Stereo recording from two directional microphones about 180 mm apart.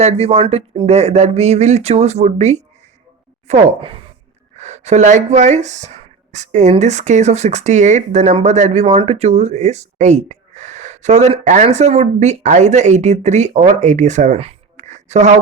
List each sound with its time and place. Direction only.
0.0 s speech: 35° right (ahead or behind)